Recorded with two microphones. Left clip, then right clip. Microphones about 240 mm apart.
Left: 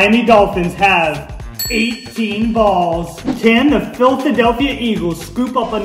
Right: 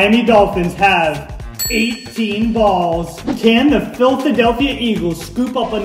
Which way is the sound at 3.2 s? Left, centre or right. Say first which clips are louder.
Left 1 dB; centre.